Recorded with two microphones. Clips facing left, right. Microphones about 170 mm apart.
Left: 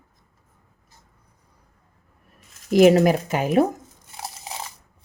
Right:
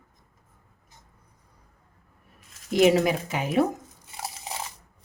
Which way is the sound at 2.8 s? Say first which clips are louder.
Left 5 dB; 50° left (ahead or behind).